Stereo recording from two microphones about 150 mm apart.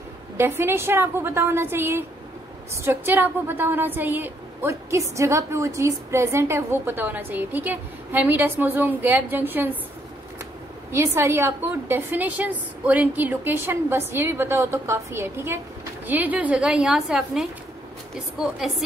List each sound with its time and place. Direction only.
0.4 s a woman's voice: 15° right (ahead or behind)
10.9 s a woman's voice: 15° right (ahead or behind); by 18.8 s centre (ahead or behind)